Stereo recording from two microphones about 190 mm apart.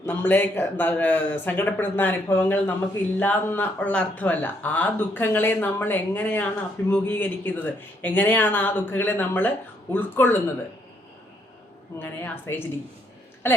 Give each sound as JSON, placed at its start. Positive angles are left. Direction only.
{"t": 0.0, "sound": "speech", "side_deg": 10}
{"t": 11.9, "sound": "a woman's voice", "side_deg": 10}